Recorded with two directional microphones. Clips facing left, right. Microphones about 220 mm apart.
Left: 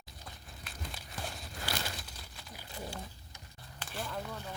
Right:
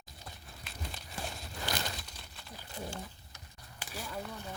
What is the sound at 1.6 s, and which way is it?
Crumpling, 5° left (ahead or behind).